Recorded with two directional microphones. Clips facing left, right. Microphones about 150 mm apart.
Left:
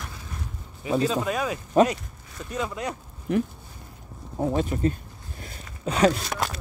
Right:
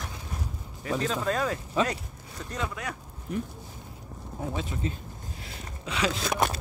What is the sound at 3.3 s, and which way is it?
Speech, 75° left (ahead or behind).